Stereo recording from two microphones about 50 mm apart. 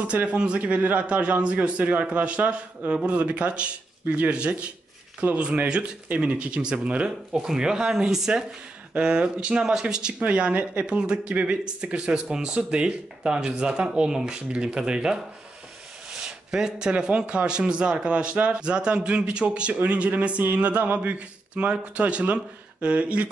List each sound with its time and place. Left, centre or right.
0.1 s a man's voice: right
7.1 s speech: centre
8.9 s a man's voice: centre
10.1 s a man's voice: right
10.9 s a man's voice: centre
16.1 s a sound: centre
17.4 s a man's voice: centre